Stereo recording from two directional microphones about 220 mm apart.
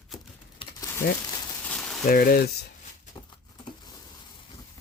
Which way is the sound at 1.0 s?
45° left (ahead or behind).